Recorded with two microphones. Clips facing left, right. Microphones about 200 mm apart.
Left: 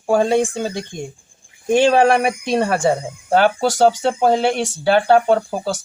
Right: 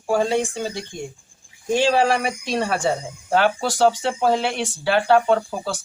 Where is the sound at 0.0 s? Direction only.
50° left (ahead or behind).